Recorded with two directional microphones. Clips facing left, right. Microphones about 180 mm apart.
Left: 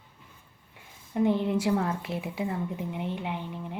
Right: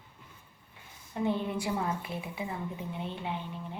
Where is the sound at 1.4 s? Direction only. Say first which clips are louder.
Left 6 dB; 75° left (ahead or behind).